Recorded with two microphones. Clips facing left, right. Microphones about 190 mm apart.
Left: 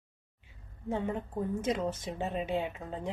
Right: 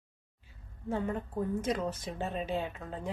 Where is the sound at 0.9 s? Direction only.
15° left (ahead or behind).